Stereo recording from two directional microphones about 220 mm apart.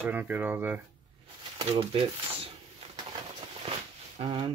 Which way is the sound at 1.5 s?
25° right (ahead or behind).